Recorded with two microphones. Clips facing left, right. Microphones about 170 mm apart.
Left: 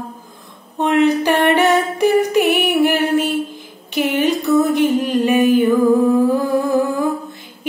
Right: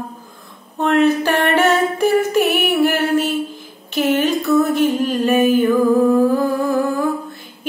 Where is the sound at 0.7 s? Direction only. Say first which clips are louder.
Even; 15° left (ahead or behind).